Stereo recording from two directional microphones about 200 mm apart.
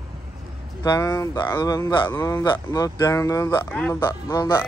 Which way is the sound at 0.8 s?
15° left (ahead or behind).